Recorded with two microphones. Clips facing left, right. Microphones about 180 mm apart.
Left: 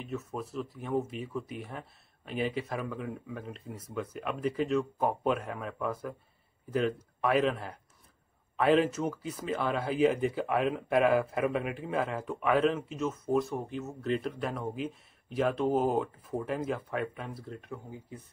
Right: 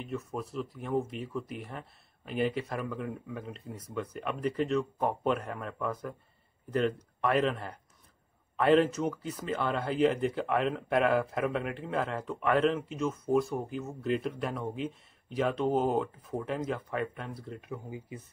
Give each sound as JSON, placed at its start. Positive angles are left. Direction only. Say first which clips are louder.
{"t": 0.0, "sound": "speech", "louder": "right 1 dB", "side_deg": 0}